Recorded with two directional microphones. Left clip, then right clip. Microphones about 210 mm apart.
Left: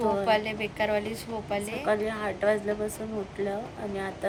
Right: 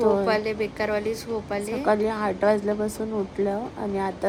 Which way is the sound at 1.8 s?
30° right (ahead or behind).